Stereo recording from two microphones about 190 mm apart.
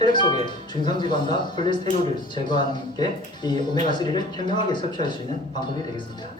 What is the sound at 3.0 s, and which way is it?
Speech, 25° left (ahead or behind).